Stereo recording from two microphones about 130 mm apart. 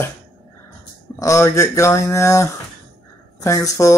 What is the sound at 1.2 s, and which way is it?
Speech, 25° left (ahead or behind).